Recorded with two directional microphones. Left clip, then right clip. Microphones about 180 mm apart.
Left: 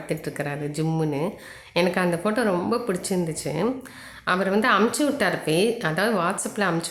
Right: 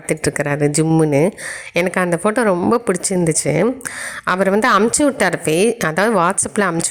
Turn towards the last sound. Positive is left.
turn(degrees=-50)  # may be behind; listen again after turning